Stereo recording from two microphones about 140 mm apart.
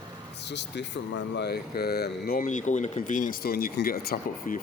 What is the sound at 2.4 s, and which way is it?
Speech, 60° left (ahead or behind).